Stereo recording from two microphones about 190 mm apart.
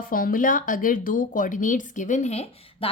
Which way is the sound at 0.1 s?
50° left (ahead or behind).